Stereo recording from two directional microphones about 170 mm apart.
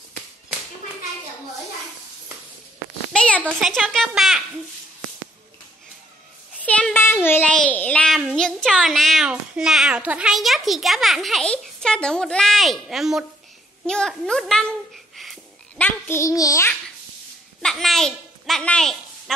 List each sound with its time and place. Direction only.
3.1 s a sound: 5° left (ahead or behind)
3.4 s a child's voice: centre (ahead or behind)
6.6 s a child's voice: 10° left (ahead or behind)
15.8 s a child's voice: 15° left (ahead or behind)
17.6 s a child's voice: centre (ahead or behind)